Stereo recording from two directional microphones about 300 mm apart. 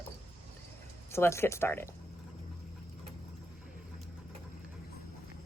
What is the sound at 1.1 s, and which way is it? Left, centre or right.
Speech, centre.